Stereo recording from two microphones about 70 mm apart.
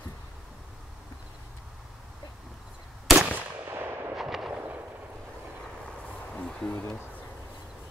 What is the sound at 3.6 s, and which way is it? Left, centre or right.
Artillery fire, right.